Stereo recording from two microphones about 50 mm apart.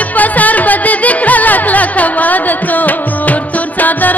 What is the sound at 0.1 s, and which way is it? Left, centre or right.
Music, left.